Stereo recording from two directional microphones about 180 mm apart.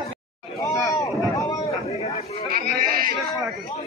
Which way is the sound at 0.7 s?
20° left (ahead or behind).